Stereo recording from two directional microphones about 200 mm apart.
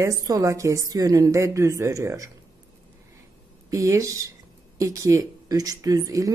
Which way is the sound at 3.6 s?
15° right (ahead or behind).